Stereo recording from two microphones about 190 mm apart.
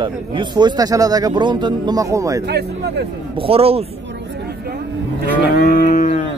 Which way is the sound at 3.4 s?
30° right (ahead or behind).